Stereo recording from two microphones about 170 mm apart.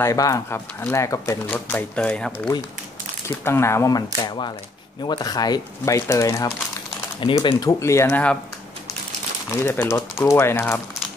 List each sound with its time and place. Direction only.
0.0 s speech: 20° left (ahead or behind)
7.2 s speech: 30° left (ahead or behind); by 8.4 s 10° left (ahead or behind)
9.5 s speech: 15° left (ahead or behind)